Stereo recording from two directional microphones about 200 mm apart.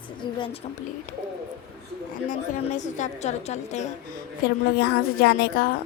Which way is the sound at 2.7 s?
40° left (ahead or behind).